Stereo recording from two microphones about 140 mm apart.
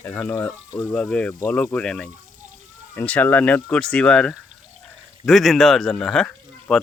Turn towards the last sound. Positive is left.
turn(degrees=5)  # may be behind; listen again after turning